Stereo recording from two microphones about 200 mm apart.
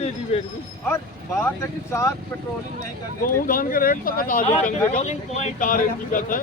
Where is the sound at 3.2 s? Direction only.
45° left (ahead or behind).